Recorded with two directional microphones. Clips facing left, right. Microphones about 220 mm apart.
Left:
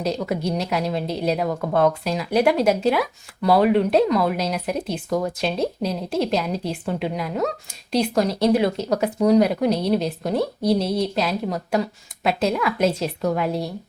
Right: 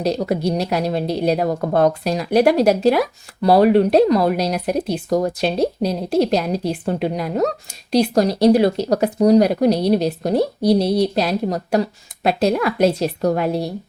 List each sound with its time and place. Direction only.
0.0 s a woman's voice: 35° right (ahead or behind)